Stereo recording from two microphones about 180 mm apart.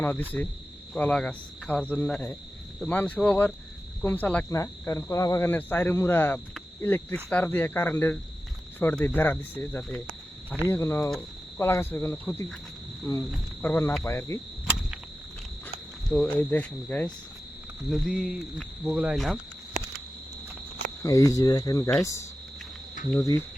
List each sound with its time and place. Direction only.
0.0 s speech: 10° left (ahead or behind)
13.6 s speech: 10° left (ahead or behind)
16.0 s speech: 5° left (ahead or behind)
17.9 s cricket: centre (ahead or behind)
21.0 s speech: 20° left (ahead or behind)
23.0 s cricket: 45° left (ahead or behind)